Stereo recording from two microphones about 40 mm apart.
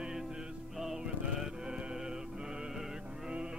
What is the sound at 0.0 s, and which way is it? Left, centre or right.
Music, centre.